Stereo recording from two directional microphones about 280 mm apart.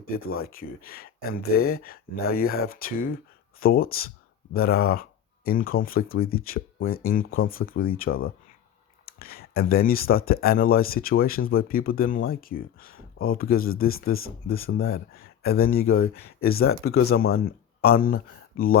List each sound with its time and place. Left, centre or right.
0.3 s speech: left